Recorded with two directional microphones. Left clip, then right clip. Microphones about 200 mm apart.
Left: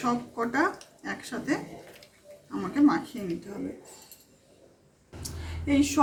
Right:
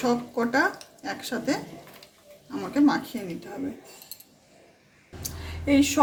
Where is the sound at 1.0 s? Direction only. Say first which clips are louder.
Right 5 dB; 55° right (ahead or behind).